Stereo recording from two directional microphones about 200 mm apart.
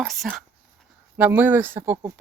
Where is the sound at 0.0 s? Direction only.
Centre (ahead or behind).